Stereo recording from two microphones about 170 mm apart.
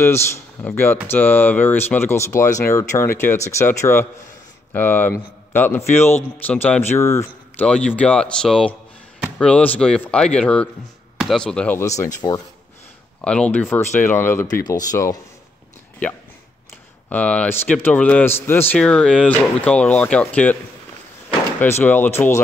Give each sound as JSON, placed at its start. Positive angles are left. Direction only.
{"t": 0.0, "sound": "a man's voice", "side_deg": 15}
{"t": 7.6, "sound": "speech", "side_deg": 5}
{"t": 11.8, "sound": "a man's voice", "side_deg": 20}
{"t": 13.2, "sound": "a man's voice", "side_deg": 5}
{"t": 16.0, "sound": "a man's voice", "side_deg": 10}